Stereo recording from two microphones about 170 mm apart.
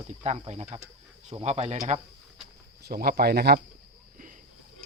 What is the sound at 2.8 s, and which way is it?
Speech, 60° right (ahead or behind).